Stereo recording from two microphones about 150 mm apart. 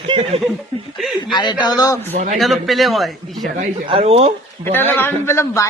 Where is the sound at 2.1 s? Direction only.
55° right (ahead or behind).